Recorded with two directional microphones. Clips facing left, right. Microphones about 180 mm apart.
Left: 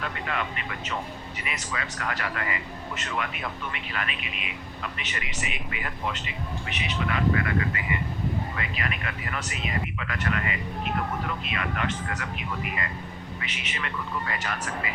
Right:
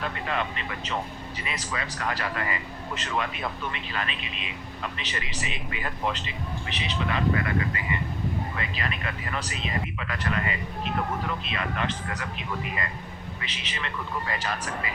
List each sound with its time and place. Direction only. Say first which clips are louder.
0.3 s speech: right 2 dB; 30° right (ahead or behind)
13.4 s speech: left 1 dB; 30° right (ahead or behind)